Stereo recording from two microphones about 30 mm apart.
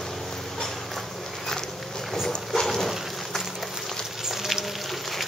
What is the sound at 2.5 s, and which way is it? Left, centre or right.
Dog, centre.